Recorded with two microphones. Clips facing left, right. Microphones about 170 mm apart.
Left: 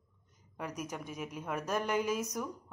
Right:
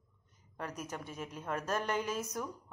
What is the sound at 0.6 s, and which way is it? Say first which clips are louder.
A woman's voice: left 2 dB; 10° left (ahead or behind).